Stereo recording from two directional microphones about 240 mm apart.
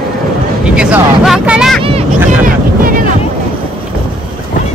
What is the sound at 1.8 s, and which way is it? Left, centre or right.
Speech, right.